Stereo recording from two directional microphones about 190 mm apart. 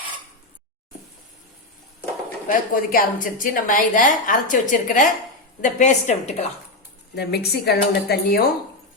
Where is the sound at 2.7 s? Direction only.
45° left (ahead or behind).